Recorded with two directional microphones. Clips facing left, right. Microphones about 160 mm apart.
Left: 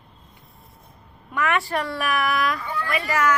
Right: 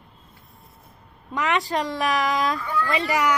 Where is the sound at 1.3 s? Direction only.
20° right (ahead or behind).